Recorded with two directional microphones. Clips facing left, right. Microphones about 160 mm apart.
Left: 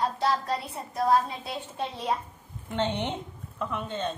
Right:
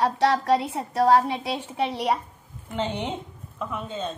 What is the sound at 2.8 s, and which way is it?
Speech, 5° right (ahead or behind).